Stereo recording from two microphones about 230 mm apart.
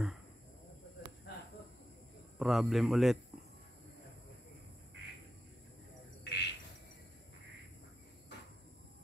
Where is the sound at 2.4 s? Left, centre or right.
Centre.